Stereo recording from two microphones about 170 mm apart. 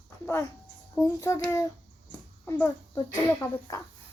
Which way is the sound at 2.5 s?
15° left (ahead or behind).